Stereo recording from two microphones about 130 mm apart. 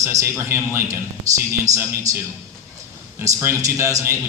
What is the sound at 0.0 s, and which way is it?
A man's voice, 25° right (ahead or behind).